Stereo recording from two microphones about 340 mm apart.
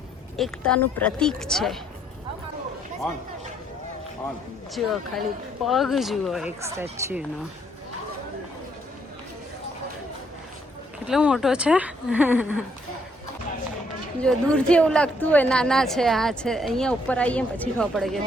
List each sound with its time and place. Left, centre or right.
0.3 s a woman's voice: centre
4.7 s a woman's voice: centre
11.0 s a woman's voice: centre
14.2 s a woman's voice: centre